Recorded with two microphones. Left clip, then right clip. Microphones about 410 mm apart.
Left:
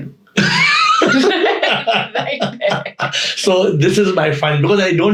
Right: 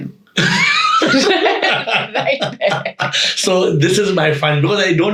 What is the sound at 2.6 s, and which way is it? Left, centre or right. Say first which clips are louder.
Speech: right 1 dB; centre.